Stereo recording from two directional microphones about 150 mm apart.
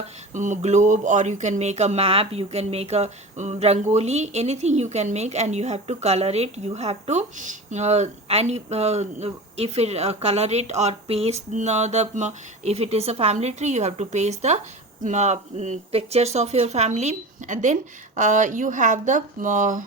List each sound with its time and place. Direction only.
0.3 s speech: 55° right (ahead or behind)